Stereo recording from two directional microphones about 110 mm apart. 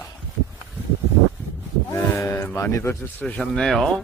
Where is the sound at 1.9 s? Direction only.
25° left (ahead or behind).